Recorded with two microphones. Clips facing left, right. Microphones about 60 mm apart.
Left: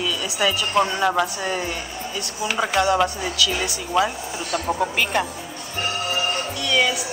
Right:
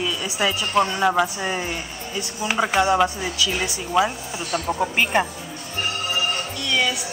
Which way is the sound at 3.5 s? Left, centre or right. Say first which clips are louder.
Even; centre.